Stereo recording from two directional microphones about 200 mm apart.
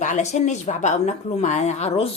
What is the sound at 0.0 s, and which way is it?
A woman's voice, 35° left (ahead or behind).